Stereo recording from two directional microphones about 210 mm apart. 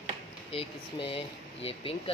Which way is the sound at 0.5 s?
25° left (ahead or behind).